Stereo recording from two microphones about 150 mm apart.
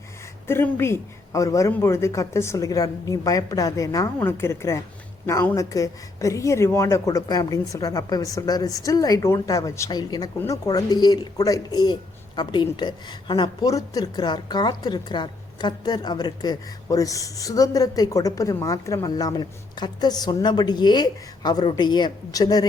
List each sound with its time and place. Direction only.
0.4 s a woman's voice: 15° left (ahead or behind)